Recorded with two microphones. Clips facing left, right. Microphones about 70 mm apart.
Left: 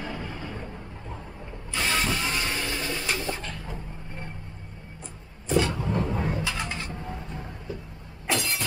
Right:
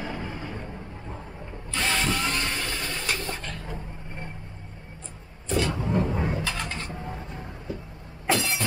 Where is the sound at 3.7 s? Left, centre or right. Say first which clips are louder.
Right 1 dB; centre.